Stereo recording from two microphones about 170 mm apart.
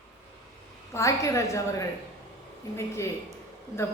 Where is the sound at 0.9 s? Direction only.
20° left (ahead or behind).